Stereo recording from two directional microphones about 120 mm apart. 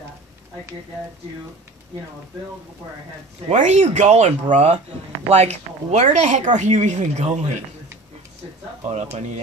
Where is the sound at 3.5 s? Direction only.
80° right.